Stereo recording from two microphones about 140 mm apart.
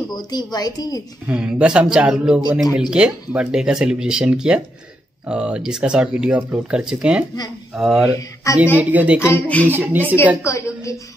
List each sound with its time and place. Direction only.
0.3 s a woman's voice: 30° left (ahead or behind)
1.2 s speech: 10° right (ahead or behind)
8.1 s a woman's voice: 25° left (ahead or behind)
8.7 s speech: 10° right (ahead or behind)
9.3 s speech: 10° left (ahead or behind)
9.7 s speech: 15° right (ahead or behind)
10.4 s a woman's voice: 20° left (ahead or behind)